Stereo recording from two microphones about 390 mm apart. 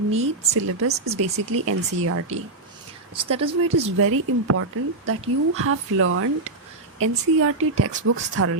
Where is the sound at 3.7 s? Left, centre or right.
Right.